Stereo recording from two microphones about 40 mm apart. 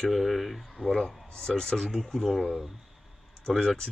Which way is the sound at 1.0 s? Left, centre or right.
Centre.